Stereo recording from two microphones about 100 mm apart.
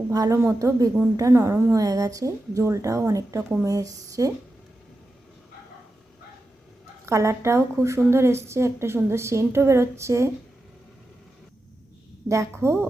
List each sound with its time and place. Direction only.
0.1 s a woman's voice: 35° right (ahead or behind)
7.0 s a woman's voice: 30° right (ahead or behind)
12.3 s a woman's voice: 30° right (ahead or behind)